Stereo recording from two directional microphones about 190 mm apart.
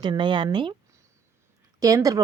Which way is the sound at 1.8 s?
20° right (ahead or behind).